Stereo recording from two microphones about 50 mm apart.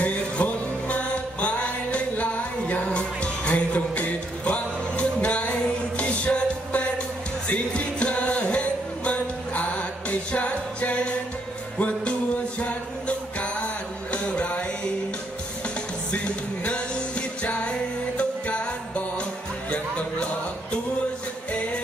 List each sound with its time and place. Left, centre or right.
0.0 s music: left
16.6 s music: left